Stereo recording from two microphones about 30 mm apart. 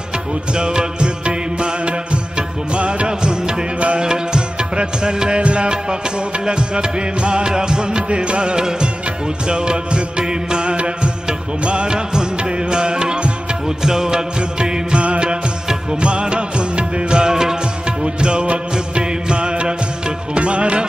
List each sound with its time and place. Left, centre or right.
0.6 s music: right
3.1 s music: right
15.0 s music: right
17.3 s music: centre
18.0 s music: right